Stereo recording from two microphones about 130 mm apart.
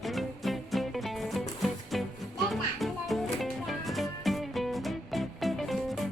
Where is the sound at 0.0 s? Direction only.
Centre (ahead or behind).